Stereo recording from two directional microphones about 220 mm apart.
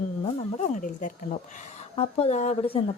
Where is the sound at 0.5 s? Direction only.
35° left (ahead or behind).